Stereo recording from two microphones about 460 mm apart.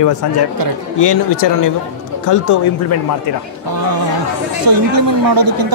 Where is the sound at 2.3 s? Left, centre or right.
Left.